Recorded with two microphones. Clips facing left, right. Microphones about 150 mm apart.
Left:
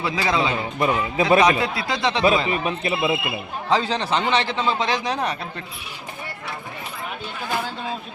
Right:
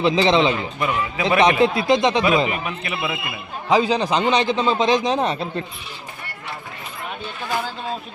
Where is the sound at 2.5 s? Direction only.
30° left (ahead or behind).